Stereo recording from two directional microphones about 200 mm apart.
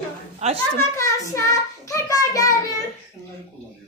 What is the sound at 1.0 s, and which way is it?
Child singing, 15° left (ahead or behind).